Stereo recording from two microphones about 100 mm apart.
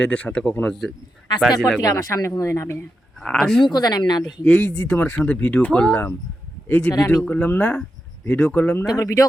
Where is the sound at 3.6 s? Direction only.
45° left (ahead or behind).